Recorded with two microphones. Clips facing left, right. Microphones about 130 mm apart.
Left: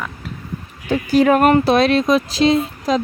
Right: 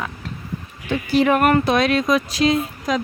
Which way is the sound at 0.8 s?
40° left (ahead or behind).